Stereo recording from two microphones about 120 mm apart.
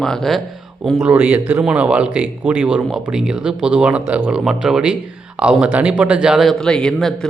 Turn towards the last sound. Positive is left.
turn(degrees=5)  # may be behind; listen again after turning